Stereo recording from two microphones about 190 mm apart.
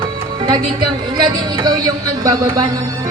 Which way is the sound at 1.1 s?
20° right (ahead or behind).